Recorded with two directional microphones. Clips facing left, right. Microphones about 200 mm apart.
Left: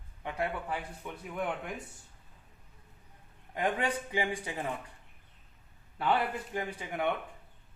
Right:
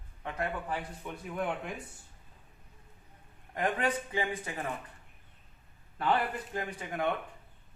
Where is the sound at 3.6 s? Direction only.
10° left (ahead or behind).